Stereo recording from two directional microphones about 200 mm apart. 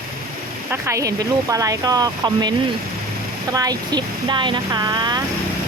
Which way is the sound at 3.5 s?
20° right (ahead or behind).